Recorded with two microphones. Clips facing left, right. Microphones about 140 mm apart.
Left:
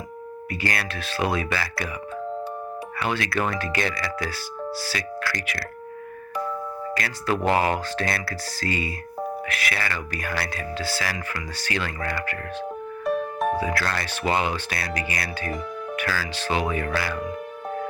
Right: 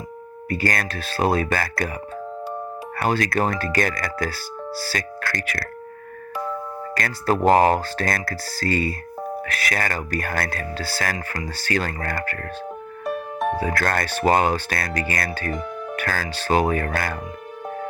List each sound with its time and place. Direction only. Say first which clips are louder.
0.5 s speech: right 5 dB; 45° right (ahead or behind)
3.0 s speech: right 4 dB; 45° right (ahead or behind)
6.9 s speech: right 4 dB; 45° right (ahead or behind)
13.1 s music: left 1 dB; centre (ahead or behind)
13.6 s speech: right 3 dB; 45° right (ahead or behind)